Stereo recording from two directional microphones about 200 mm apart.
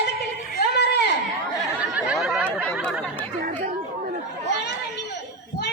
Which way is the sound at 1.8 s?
5° right (ahead or behind).